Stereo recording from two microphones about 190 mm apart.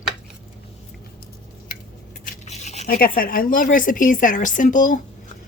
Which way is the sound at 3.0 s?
50° left (ahead or behind).